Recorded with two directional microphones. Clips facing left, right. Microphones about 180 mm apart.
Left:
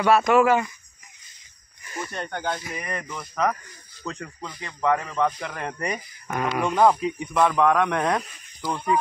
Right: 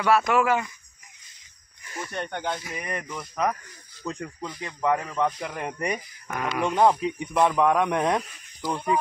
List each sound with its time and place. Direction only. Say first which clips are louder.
0.0 s speech: left 3 dB; 20° left (ahead or behind)
2.4 s speech: left 1 dB; 5° right (ahead or behind)
6.2 s speech: left 4 dB; 25° left (ahead or behind)
6.6 s speech: left 1 dB; 20° right (ahead or behind); by 9.0 s 5° right (ahead or behind)